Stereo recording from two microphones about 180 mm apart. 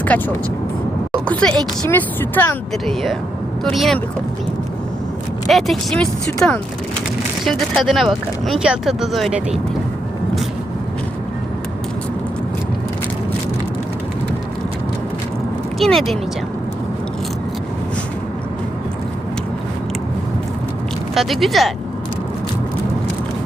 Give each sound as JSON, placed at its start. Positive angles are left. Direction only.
{"t": 0.1, "sound": "speech", "side_deg": 10}
{"t": 1.3, "sound": "speech", "side_deg": 5}
{"t": 5.5, "sound": "speech", "side_deg": 0}
{"t": 15.8, "sound": "speech", "side_deg": 0}
{"t": 21.2, "sound": "speech", "side_deg": 0}